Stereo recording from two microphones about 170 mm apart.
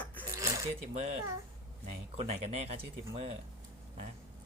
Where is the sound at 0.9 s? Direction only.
40° right (ahead or behind).